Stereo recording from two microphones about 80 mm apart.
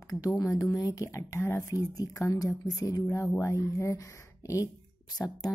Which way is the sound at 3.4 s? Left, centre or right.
Left.